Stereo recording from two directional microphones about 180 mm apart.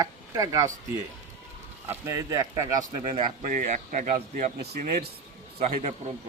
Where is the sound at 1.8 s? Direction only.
15° right (ahead or behind).